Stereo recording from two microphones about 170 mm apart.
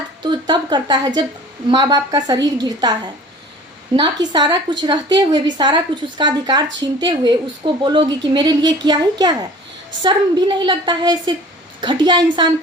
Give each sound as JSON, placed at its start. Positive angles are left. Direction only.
{"t": 0.2, "sound": "a woman's voice", "side_deg": -25}